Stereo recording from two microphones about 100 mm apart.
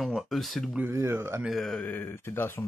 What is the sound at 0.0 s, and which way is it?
Speech, centre (ahead or behind).